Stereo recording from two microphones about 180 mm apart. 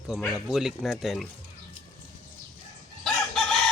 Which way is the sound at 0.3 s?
Centre (ahead or behind).